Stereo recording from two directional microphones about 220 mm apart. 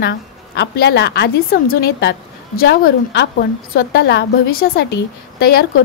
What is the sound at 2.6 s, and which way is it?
A woman's voice, 45° left (ahead or behind).